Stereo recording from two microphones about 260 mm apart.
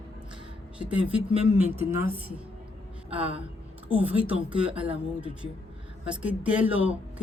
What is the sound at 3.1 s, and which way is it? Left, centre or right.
Music, right.